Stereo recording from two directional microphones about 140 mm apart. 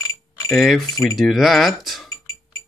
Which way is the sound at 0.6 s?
Centre (ahead or behind).